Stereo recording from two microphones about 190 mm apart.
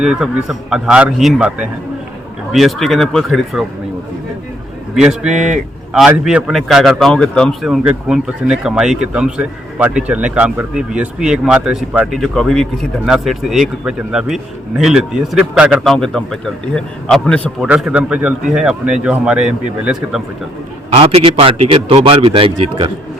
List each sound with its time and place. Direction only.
0.0 s a man's voice: 5° right (ahead or behind)
4.9 s a man's voice: 5° right (ahead or behind)
17.7 s a man's voice: 5° right (ahead or behind)
20.9 s a man's voice: 30° right (ahead or behind)